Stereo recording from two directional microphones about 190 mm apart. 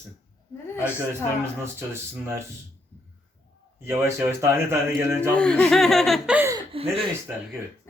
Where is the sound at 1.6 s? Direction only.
15° right (ahead or behind).